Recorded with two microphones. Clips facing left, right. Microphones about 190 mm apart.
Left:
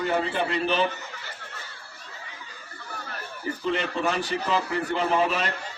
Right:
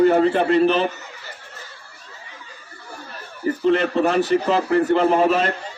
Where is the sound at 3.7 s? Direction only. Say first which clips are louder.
Right 8 dB; 40° right (ahead or behind).